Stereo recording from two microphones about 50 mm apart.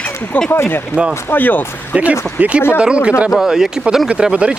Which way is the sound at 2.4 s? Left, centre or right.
Right.